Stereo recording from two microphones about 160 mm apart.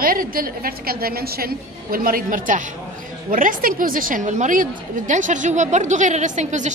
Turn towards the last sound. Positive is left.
turn(degrees=-50)  # may be behind; listen again after turning